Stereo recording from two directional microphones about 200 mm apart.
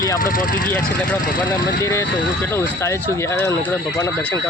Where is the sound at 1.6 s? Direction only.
15° left (ahead or behind).